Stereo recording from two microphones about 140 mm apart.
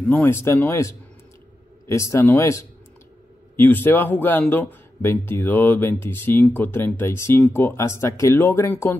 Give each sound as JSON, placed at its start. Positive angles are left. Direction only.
{"t": 0.0, "sound": "a man's voice", "side_deg": 15}